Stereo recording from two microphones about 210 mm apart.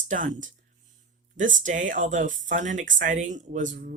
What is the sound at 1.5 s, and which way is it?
Speech, 35° right (ahead or behind).